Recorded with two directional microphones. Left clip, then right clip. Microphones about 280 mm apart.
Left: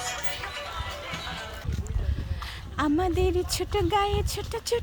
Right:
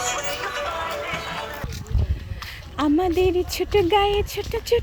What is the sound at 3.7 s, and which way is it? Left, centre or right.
Speech, centre.